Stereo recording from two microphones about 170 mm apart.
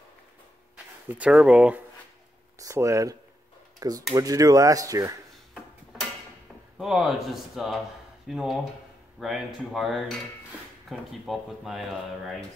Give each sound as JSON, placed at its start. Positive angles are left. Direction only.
{"t": 1.0, "sound": "speech", "side_deg": -10}
{"t": 2.6, "sound": "speech", "side_deg": -15}
{"t": 6.8, "sound": "speech", "side_deg": -5}